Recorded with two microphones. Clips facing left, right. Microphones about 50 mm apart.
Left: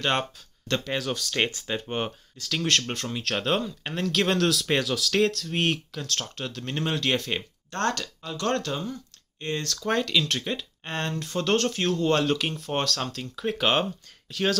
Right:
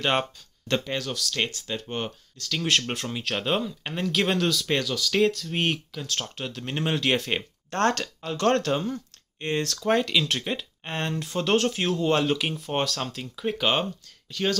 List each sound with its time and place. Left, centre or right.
0.0 s speech: centre
1.1 s speech: left; by 2.6 s centre
2.6 s speech: centre
3.1 s speech: centre
7.7 s speech: right; by 14.6 s centre